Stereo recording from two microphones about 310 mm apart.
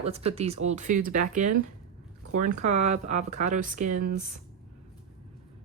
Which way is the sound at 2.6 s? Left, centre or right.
Right.